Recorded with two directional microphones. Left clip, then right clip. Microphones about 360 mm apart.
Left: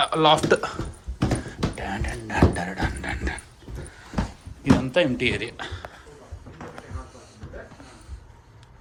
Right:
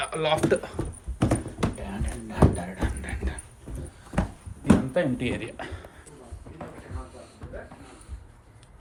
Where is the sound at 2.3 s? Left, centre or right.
Centre.